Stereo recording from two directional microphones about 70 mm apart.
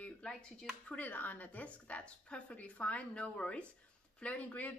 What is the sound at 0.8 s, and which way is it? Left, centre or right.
Speech, left.